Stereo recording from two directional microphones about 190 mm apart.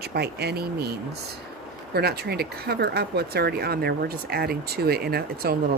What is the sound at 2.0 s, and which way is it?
Speech, 55° right (ahead or behind).